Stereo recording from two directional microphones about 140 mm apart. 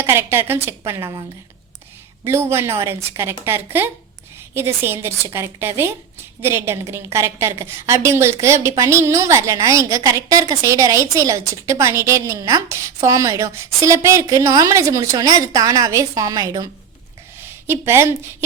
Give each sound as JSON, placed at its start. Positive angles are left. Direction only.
{"t": 0.0, "sound": "a woman's voice", "side_deg": -15}
{"t": 2.2, "sound": "a woman's voice", "side_deg": -15}
{"t": 17.7, "sound": "a woman's voice", "side_deg": -20}